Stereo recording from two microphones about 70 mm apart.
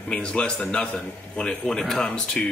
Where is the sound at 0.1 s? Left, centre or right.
Centre.